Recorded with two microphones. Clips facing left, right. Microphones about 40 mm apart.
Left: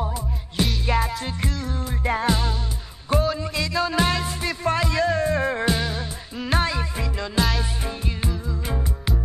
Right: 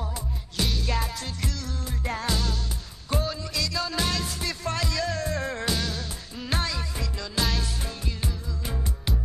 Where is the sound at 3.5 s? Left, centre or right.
Left.